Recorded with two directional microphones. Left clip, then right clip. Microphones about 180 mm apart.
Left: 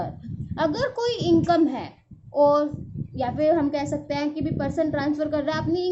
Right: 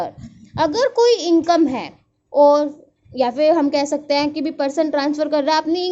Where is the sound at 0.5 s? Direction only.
40° right (ahead or behind).